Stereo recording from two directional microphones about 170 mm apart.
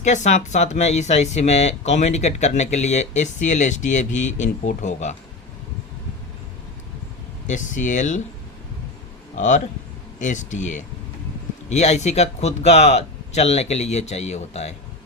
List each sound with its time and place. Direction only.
0.0 s speech: 45° left (ahead or behind)
7.4 s speech: 45° left (ahead or behind)
10.2 s speech: 45° left (ahead or behind)